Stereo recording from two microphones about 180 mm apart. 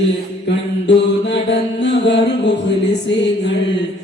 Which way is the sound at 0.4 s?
75° left (ahead or behind).